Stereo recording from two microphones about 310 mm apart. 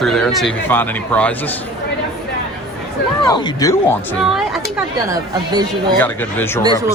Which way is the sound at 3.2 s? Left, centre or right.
Centre.